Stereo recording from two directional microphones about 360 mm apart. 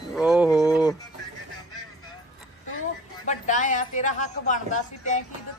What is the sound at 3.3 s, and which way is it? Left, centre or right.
Speech, left.